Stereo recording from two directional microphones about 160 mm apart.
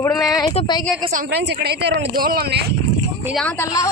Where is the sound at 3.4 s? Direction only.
10° left (ahead or behind).